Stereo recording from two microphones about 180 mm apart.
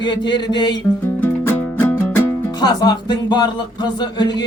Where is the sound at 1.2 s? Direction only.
10° left (ahead or behind).